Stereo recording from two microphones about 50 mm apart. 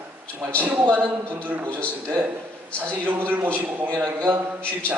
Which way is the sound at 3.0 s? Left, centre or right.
Right.